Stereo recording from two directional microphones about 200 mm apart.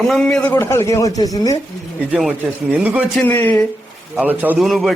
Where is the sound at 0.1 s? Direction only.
5° left (ahead or behind).